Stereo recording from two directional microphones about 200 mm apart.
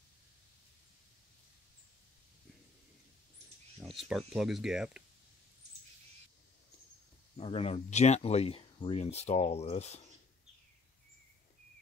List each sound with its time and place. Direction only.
4.1 s speech: centre (ahead or behind)
7.3 s speech: 30° left (ahead or behind)